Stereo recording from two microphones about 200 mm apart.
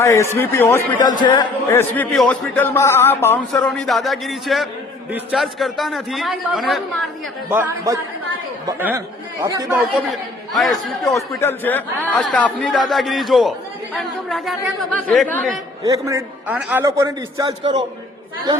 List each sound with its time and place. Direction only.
0.0 s a man's voice: 15° left (ahead or behind)
1.2 s speech: 20° left (ahead or behind)
1.7 s a man's voice: 10° left (ahead or behind)
3.8 s a man's voice: centre (ahead or behind)
7.5 s a man's voice: 15° right (ahead or behind)
10.6 s a man's voice: centre (ahead or behind)
11.1 s a man's voice: 10° left (ahead or behind)
15.8 s a man's voice: 15° right (ahead or behind)